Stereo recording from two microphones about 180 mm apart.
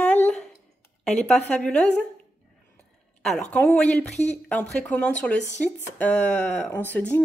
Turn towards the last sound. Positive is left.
turn(degrees=10)  # may be behind; listen again after turning